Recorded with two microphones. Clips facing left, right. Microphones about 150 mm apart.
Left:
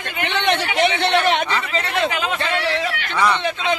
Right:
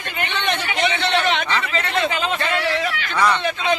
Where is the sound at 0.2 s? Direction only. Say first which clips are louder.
Left 4 dB; 85° left; by 1.4 s 60° left (ahead or behind).